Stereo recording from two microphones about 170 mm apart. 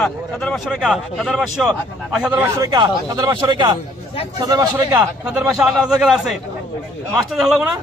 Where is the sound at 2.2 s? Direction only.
10° right (ahead or behind).